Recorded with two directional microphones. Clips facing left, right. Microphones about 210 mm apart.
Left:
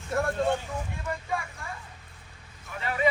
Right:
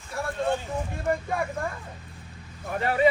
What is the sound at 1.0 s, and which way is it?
Speech, 55° right (ahead or behind).